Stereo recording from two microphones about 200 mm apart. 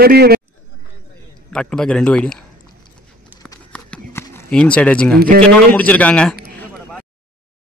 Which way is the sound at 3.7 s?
10° left (ahead or behind).